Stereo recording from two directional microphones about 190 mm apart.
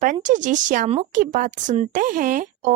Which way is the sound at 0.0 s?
40° right (ahead or behind).